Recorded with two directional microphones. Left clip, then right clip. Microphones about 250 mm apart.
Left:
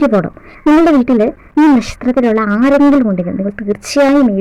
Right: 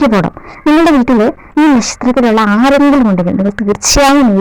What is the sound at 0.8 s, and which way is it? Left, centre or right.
Speech, right.